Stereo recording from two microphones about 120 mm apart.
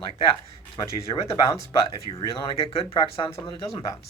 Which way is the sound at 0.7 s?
30° left (ahead or behind).